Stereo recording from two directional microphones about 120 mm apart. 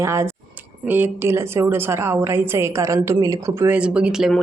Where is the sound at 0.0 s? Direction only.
20° right (ahead or behind).